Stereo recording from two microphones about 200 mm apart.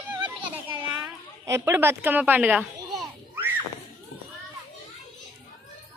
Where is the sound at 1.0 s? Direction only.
10° right (ahead or behind).